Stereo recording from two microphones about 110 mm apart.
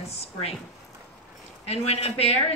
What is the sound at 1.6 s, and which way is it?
Speech, 70° left (ahead or behind).